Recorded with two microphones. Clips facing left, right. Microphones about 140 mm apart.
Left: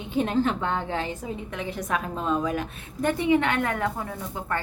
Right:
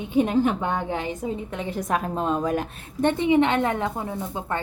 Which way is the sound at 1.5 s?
30° right (ahead or behind).